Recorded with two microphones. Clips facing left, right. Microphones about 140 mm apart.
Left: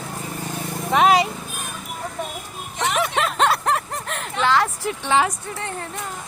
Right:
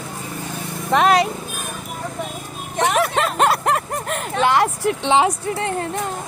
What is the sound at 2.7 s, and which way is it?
Vehicle, 50° right (ahead or behind).